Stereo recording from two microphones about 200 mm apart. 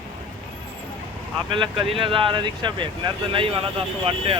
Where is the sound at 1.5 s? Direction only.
25° right (ahead or behind).